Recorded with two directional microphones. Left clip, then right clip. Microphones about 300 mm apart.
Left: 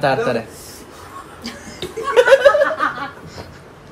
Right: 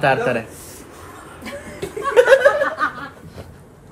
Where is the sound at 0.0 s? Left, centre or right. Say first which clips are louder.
Even; centre.